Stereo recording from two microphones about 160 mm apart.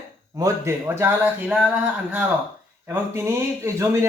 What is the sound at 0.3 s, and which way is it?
A man's voice, 20° right (ahead or behind).